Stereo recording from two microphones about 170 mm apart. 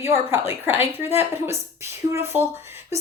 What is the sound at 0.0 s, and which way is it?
A woman's voice, 15° right (ahead or behind).